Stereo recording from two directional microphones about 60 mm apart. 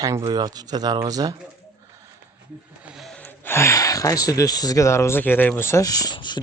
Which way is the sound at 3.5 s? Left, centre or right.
Left.